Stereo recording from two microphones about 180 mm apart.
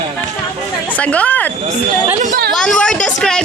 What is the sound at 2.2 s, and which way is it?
Speech, 45° right (ahead or behind).